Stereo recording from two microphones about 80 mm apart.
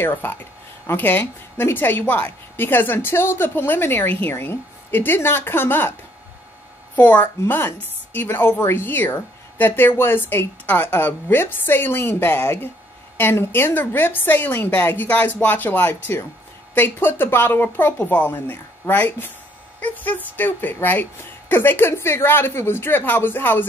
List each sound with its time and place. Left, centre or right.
0.0 s speech: left
7.0 s speech: left